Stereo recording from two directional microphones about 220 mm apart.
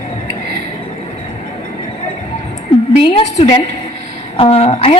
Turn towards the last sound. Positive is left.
turn(degrees=25)  # may be behind; listen again after turning